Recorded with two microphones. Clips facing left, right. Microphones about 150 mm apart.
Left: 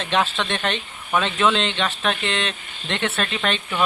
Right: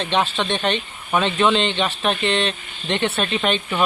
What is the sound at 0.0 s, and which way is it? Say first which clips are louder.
Speech: right 1 dB; centre (ahead or behind).